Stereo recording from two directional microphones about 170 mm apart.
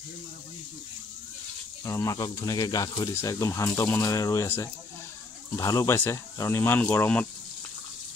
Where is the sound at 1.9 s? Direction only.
20° left (ahead or behind).